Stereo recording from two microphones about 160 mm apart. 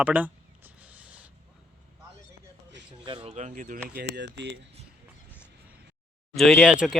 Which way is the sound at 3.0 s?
35° right (ahead or behind).